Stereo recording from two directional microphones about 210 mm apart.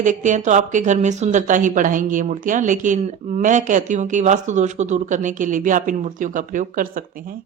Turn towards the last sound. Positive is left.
turn(degrees=-40)  # may be behind; listen again after turning